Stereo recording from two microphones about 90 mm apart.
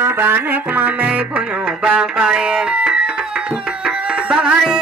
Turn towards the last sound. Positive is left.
turn(degrees=-10)  # may be behind; listen again after turning